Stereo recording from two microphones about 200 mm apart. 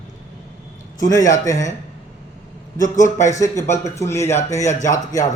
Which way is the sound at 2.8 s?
40° left (ahead or behind).